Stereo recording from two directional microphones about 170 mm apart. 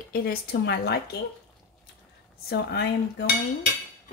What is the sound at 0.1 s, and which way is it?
Speech, 65° left (ahead or behind).